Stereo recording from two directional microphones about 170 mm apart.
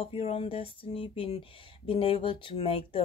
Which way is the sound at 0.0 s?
35° left (ahead or behind).